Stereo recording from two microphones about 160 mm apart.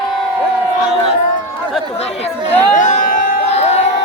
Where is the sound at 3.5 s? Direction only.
40° left (ahead or behind).